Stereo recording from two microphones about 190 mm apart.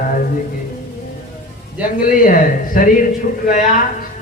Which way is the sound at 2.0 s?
45° left (ahead or behind).